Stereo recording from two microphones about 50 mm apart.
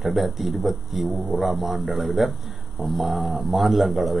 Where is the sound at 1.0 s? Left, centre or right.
Centre.